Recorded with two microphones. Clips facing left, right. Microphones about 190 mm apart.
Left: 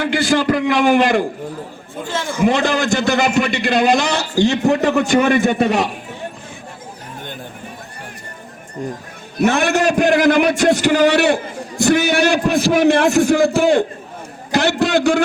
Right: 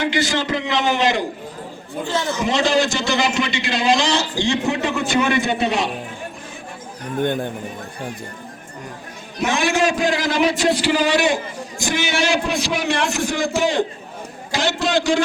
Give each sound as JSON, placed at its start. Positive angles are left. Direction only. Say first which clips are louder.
{"t": 0.0, "sound": "a sound", "louder": "left 4 dB", "side_deg": 55}
{"t": 0.8, "sound": "a man's voice", "louder": "left 4 dB", "side_deg": 55}
{"t": 2.0, "sound": "a man's voice", "louder": "right 1 dB", "side_deg": 10}
{"t": 2.4, "sound": "a man's voice", "louder": "left 3 dB", "side_deg": 55}
{"t": 9.4, "sound": "a man's voice", "louder": "left 4 dB", "side_deg": 60}